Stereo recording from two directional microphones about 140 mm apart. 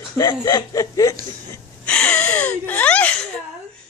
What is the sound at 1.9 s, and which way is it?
Speech, 10° left (ahead or behind).